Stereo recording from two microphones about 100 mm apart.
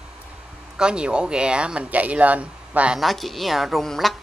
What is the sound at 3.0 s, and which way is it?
A woman's voice, centre (ahead or behind).